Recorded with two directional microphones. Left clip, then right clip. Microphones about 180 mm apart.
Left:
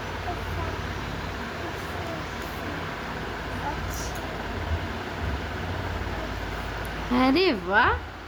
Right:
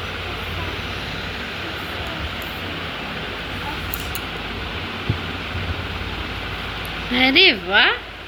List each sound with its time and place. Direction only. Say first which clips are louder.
7.2 s speech: right 9 dB; 15° left (ahead or behind)